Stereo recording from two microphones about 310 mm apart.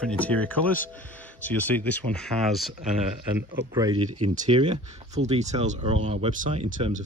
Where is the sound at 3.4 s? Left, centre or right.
Centre.